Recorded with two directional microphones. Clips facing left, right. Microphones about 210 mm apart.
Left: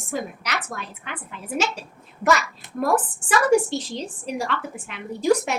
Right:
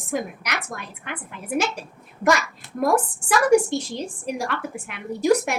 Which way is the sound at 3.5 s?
10° right (ahead or behind).